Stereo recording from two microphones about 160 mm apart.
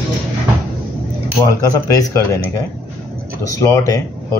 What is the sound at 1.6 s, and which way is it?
Speech, 20° left (ahead or behind).